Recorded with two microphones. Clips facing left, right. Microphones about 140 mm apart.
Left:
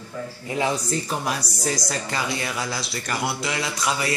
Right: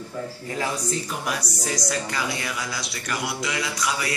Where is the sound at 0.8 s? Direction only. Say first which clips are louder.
Left 2 dB; 35° left (ahead or behind).